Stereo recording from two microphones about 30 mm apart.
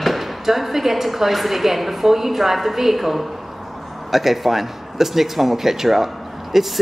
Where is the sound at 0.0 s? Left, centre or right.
Centre.